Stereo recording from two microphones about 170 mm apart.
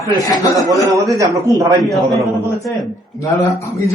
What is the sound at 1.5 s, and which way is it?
Speech, 20° right (ahead or behind).